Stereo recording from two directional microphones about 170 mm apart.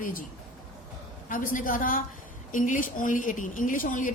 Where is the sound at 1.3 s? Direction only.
55° left (ahead or behind).